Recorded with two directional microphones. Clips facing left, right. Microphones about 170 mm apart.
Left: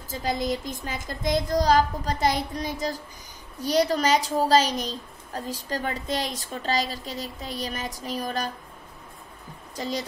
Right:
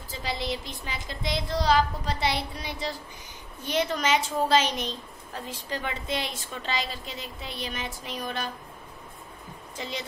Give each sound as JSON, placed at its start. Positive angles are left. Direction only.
{"t": 0.1, "sound": "a woman's voice", "side_deg": 45}
{"t": 9.8, "sound": "a woman's voice", "side_deg": 40}